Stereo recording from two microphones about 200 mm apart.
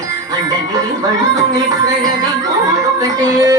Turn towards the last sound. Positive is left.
turn(degrees=-15)  # may be behind; listen again after turning